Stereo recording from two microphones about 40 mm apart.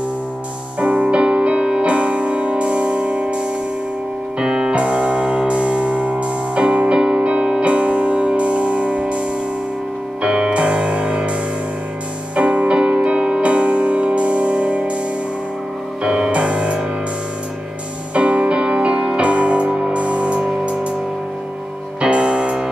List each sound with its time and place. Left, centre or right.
0.7 s music: right
10.2 s music: right
12.4 s music: right
16.0 s music: right
18.1 s music: right
22.0 s music: right